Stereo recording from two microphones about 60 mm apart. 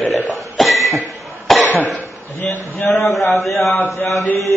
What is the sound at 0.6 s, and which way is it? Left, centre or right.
Cough, centre.